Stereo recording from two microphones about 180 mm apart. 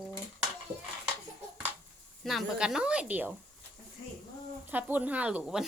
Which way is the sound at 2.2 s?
Centre (ahead or behind).